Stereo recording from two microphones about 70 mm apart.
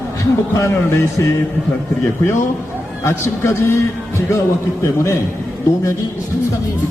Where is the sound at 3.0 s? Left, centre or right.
Left.